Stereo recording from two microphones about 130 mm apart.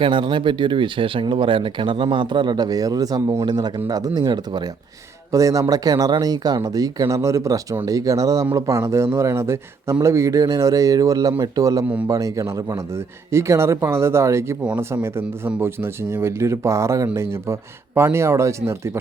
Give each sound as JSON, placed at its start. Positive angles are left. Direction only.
{"t": 0.0, "sound": "speech", "side_deg": -40}